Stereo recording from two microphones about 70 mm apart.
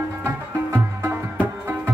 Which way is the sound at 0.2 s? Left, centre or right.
Right.